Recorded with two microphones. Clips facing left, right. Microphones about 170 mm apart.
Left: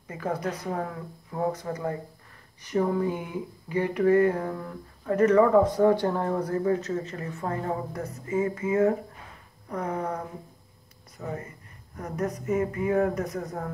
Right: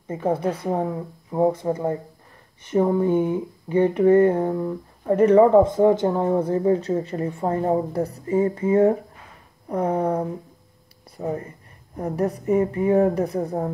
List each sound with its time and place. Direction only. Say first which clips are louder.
0.1 s speech: right 7 dB; 25° right (ahead or behind)
5.1 s speech: right 5 dB; 30° right (ahead or behind)